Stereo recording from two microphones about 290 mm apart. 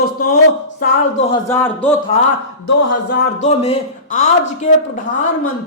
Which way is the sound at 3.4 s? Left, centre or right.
Left.